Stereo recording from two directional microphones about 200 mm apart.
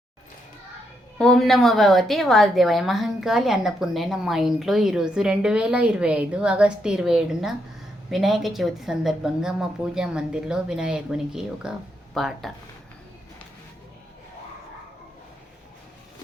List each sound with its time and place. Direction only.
1.2 s a woman's voice: centre (ahead or behind)